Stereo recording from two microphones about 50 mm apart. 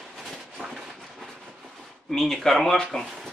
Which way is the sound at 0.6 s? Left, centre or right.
Right.